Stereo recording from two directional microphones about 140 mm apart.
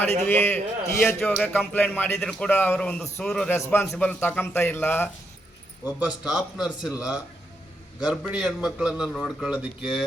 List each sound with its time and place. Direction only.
0.0 s a man's voice: 15° left (ahead or behind)
1.2 s a man's voice: 5° left (ahead or behind)
5.8 s a man's voice: 10° right (ahead or behind)